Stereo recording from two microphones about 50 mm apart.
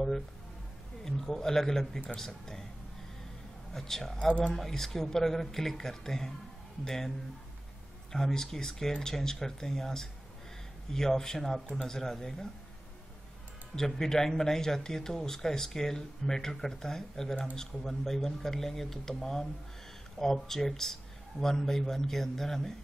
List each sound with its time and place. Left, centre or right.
1.0 s speech: centre
3.7 s speech: centre
4.3 s speech: left
4.6 s speech: centre
8.1 s speech: centre
13.7 s speech: centre